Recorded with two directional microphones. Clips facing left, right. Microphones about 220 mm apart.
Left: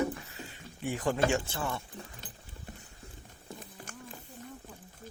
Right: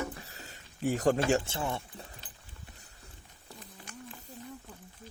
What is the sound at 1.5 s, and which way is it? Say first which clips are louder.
Speech: right 1 dB; 20° right (ahead or behind).